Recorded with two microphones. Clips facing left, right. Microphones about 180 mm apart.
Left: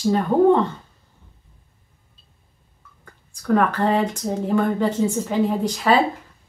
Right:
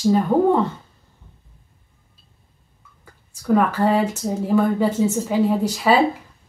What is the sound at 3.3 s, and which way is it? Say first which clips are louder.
Speech: right 1 dB; 5° right (ahead or behind).